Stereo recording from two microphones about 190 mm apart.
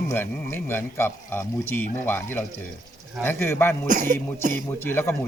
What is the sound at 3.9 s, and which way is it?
Speech, 45° right (ahead or behind).